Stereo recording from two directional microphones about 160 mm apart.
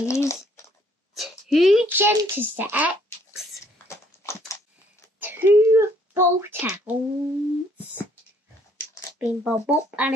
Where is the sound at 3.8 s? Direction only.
15° left (ahead or behind).